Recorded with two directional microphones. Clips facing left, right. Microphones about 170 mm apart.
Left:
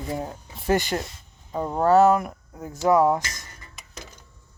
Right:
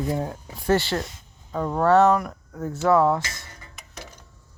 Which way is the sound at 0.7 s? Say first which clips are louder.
Right 1 dB; 15° left (ahead or behind).